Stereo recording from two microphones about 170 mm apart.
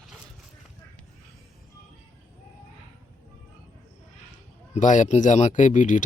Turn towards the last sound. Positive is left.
turn(degrees=45)  # may be behind; listen again after turning